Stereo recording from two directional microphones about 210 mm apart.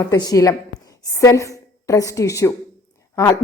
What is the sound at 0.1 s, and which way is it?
A woman's voice, 15° left (ahead or behind).